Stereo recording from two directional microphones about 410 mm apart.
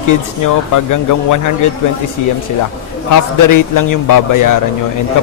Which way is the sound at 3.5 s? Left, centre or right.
Left.